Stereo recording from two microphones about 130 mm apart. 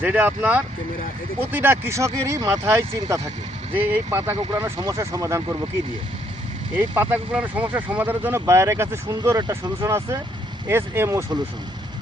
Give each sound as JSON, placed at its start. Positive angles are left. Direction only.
{"t": 0.0, "sound": "speech", "side_deg": -15}
{"t": 3.8, "sound": "speech", "side_deg": -15}
{"t": 4.5, "sound": "speech", "side_deg": -25}
{"t": 6.7, "sound": "speech", "side_deg": -15}